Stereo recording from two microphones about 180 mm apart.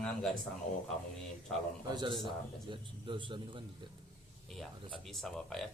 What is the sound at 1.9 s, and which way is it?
A man's voice, 25° right (ahead or behind).